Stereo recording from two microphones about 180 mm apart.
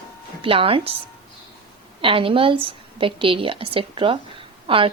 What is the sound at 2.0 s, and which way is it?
A woman's voice, 30° right (ahead or behind).